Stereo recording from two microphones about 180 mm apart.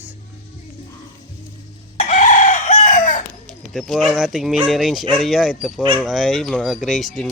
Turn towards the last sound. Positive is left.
turn(degrees=0)  # may be behind; listen again after turning